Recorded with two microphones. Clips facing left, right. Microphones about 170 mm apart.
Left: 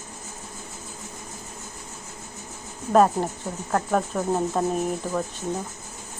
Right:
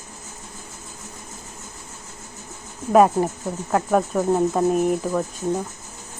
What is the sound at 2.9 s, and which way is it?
Speech, 5° right (ahead or behind).